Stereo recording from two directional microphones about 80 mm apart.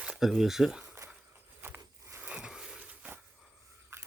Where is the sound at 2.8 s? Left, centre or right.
Right.